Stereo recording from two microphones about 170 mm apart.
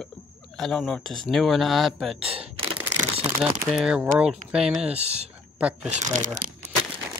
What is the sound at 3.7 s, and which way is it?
Speech, 5° right (ahead or behind).